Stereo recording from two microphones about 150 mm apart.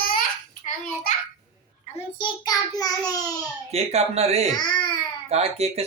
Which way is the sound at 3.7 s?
45° right (ahead or behind).